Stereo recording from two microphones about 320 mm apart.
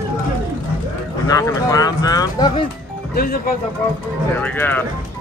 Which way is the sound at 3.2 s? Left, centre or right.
Left.